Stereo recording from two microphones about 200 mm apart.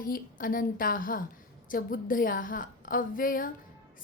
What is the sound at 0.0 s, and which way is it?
A woman's voice, 45° left (ahead or behind).